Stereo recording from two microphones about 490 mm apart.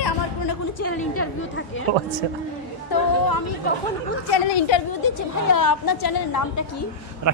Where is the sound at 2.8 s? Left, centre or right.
Left.